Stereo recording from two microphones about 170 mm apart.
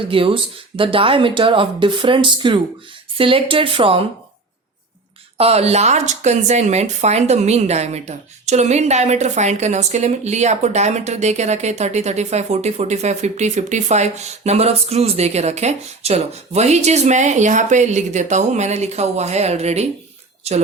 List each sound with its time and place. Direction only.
0.1 s speech: 30° right (ahead or behind)
5.4 s speech: 35° right (ahead or behind)